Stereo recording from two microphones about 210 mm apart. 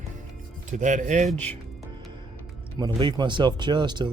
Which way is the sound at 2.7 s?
20° right (ahead or behind).